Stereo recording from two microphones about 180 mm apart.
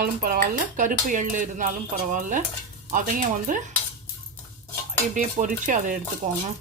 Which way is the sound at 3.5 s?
50° right (ahead or behind).